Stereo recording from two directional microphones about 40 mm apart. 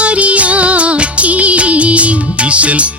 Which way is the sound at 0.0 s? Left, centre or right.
Right.